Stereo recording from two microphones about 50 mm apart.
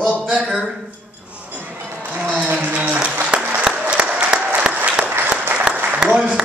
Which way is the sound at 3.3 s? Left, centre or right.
Right.